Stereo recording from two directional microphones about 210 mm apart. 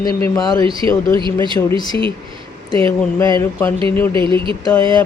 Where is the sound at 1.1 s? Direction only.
25° right (ahead or behind).